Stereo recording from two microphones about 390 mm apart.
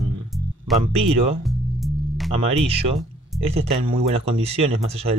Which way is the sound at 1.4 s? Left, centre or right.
Centre.